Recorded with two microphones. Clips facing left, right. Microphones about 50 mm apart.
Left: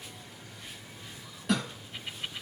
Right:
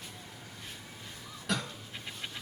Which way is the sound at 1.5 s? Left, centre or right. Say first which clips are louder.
Left 4 dB; centre.